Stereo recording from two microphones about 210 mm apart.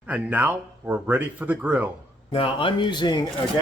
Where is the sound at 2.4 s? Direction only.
25° left (ahead or behind).